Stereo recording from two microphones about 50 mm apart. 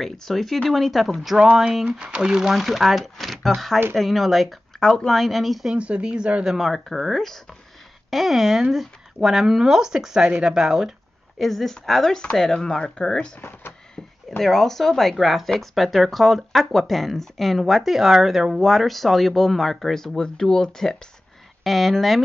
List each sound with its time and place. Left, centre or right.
0.0 s speech: centre
1.9 s speech: centre
2.5 s speech: centre
4.7 s speech: centre
5.7 s speech: right
6.6 s speech: centre
11.3 s speech: centre
13.4 s speech: left
14.4 s speech: centre
21.6 s speech: centre